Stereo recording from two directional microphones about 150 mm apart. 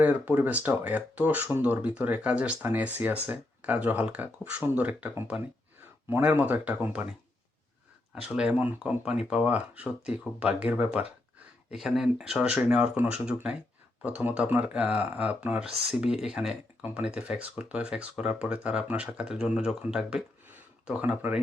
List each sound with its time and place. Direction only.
0.0 s speech: 10° right (ahead or behind)
8.1 s speech: 5° right (ahead or behind)